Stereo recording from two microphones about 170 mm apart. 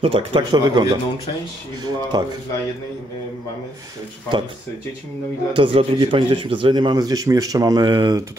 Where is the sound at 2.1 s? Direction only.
20° right (ahead or behind).